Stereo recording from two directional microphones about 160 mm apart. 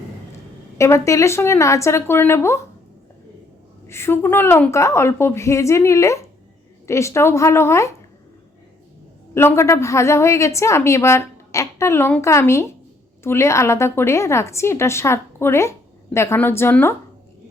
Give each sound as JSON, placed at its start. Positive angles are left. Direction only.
{"t": 0.8, "sound": "a woman's voice", "side_deg": 20}
{"t": 3.8, "sound": "a woman's voice", "side_deg": 15}
{"t": 9.3, "sound": "a woman's voice", "side_deg": 15}